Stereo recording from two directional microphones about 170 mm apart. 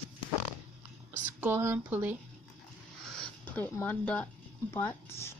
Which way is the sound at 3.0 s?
5° left (ahead or behind).